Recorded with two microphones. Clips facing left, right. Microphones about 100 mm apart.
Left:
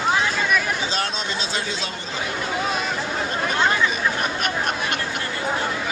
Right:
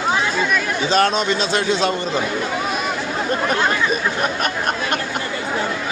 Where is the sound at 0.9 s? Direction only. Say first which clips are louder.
Right 10 dB; 65° right (ahead or behind).